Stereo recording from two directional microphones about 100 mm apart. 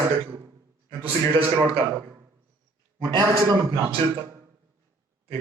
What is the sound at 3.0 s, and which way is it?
Speech, 45° right (ahead or behind).